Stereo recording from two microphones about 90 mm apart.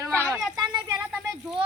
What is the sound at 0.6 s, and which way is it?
Speech, 50° right (ahead or behind).